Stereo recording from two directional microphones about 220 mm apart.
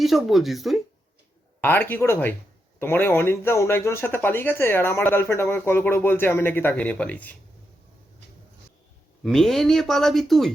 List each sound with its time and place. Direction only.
0.0 s speech: centre (ahead or behind)
9.2 s speech: centre (ahead or behind)